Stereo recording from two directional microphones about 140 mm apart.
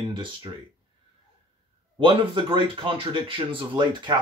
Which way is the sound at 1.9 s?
40° right (ahead or behind).